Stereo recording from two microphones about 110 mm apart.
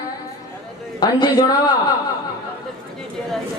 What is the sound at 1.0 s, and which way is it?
Speech, 35° left (ahead or behind).